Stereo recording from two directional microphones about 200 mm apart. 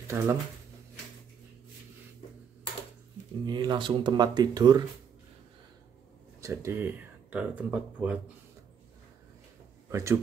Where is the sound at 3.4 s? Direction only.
20° right (ahead or behind).